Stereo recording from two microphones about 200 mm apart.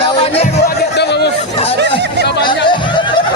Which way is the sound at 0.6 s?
55° left (ahead or behind).